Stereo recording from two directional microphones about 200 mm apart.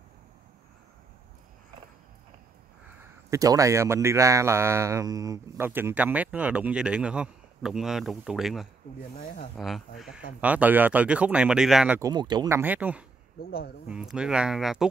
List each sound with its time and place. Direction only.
3.3 s speech: 15° right (ahead or behind); by 8.6 s centre (ahead or behind)
9.2 s speech: 45° left (ahead or behind)
9.6 s speech: centre (ahead or behind)
12.0 s speech: 20° right (ahead or behind)
13.4 s speech: 50° left (ahead or behind)
13.8 s speech: 5° right (ahead or behind)